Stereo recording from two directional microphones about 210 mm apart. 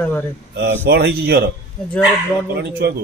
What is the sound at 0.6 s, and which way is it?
Speech, 50° right (ahead or behind).